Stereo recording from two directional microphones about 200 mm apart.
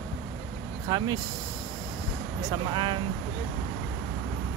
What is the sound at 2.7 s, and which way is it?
Speech, 25° right (ahead or behind).